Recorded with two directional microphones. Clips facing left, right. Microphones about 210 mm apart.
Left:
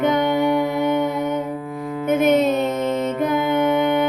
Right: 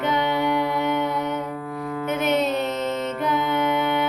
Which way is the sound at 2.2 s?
50° left (ahead or behind).